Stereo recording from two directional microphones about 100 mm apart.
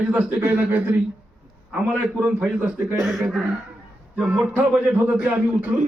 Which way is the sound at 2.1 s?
10° right (ahead or behind).